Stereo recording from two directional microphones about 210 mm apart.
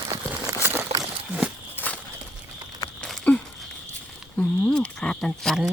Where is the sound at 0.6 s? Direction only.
10° right (ahead or behind).